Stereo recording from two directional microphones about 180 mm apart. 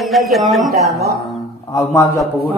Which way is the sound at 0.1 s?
Centre (ahead or behind).